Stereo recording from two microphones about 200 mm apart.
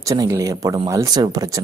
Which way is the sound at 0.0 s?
15° right (ahead or behind).